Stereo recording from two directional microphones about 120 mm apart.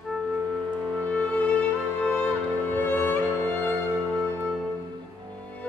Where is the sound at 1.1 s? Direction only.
15° left (ahead or behind).